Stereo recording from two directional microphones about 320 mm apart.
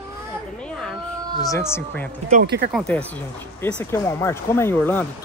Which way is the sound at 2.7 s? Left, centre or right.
Centre.